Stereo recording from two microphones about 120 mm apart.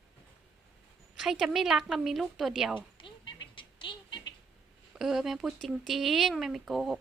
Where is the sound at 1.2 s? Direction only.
Centre (ahead or behind).